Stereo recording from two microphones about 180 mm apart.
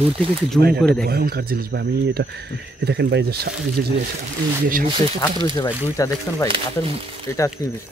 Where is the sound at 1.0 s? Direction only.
60° right (ahead or behind).